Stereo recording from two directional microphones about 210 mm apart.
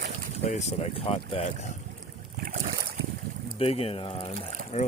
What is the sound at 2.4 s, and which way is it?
Boat, 35° right (ahead or behind).